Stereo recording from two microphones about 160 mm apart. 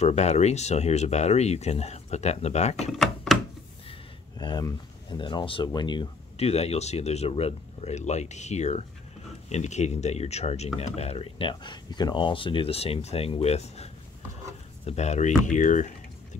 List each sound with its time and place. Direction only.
0.0 s speech: 45° left (ahead or behind)
2.9 s speech: centre (ahead or behind)
4.4 s speech: 25° left (ahead or behind)
6.3 s speech: 40° left (ahead or behind)
14.9 s speech: 45° left (ahead or behind)